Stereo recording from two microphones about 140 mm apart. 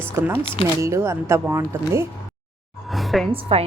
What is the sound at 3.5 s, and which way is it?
Speech, 40° right (ahead or behind).